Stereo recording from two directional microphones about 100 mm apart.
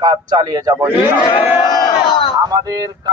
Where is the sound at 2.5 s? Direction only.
35° right (ahead or behind).